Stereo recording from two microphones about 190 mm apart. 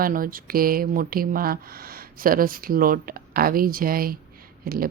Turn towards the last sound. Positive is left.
turn(degrees=-50)  # may be behind; listen again after turning